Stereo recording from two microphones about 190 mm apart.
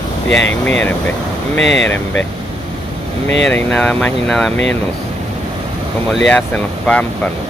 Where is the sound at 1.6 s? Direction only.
70° left (ahead or behind).